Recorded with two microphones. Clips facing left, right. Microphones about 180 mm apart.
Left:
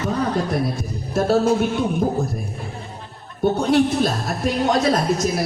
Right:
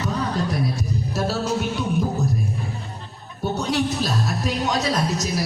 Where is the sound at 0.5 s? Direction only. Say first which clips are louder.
Left 2 dB; 50° left (ahead or behind).